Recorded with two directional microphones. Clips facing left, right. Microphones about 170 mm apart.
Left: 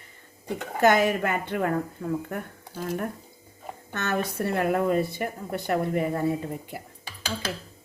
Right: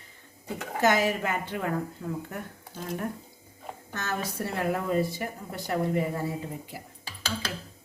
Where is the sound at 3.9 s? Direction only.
65° left (ahead or behind).